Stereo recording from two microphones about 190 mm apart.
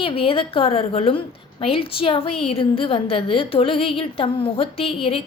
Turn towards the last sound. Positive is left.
turn(degrees=30)  # may be behind; listen again after turning